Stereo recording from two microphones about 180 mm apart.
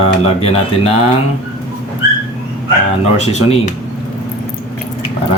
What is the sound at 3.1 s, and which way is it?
Speech, 35° left (ahead or behind).